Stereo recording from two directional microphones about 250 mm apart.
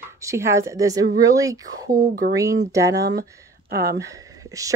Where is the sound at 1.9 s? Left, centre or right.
Right.